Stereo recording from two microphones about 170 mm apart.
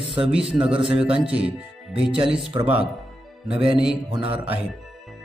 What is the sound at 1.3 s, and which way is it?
Speech, 5° right (ahead or behind).